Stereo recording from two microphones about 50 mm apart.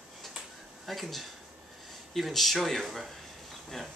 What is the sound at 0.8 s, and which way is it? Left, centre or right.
Speech, centre.